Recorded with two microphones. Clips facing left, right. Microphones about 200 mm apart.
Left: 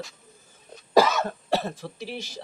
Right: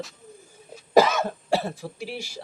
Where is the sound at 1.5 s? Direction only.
10° right (ahead or behind).